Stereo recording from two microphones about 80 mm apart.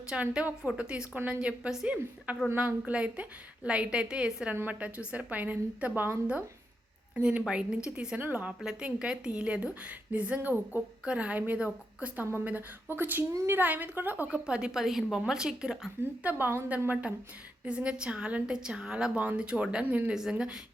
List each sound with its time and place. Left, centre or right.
0.1 s a woman's voice: centre
4.5 s a woman's voice: right
7.2 s a woman's voice: centre
16.2 s a woman's voice: right